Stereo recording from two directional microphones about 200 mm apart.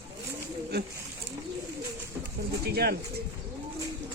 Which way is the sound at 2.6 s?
50° right (ahead or behind).